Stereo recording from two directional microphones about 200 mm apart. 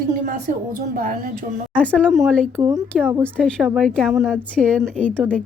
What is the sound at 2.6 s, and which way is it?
Speech, 15° right (ahead or behind).